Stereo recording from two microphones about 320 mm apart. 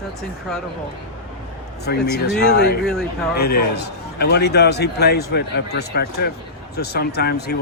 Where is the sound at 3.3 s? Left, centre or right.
Left.